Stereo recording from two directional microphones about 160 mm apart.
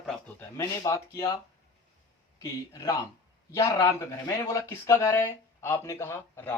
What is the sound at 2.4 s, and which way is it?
Speech, 20° left (ahead or behind).